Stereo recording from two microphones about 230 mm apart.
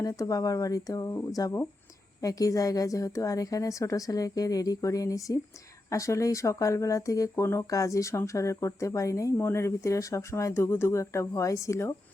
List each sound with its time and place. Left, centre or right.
0.0 s speech: centre